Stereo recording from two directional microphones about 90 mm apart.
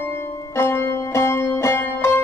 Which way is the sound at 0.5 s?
30° left (ahead or behind).